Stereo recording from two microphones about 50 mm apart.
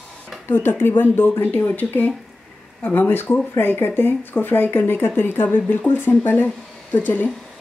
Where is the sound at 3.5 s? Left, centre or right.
Left.